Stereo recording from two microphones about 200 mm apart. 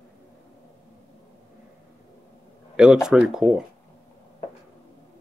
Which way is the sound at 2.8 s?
5° right (ahead or behind).